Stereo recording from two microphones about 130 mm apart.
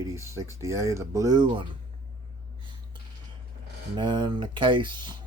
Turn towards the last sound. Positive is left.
turn(degrees=-35)  # may be behind; listen again after turning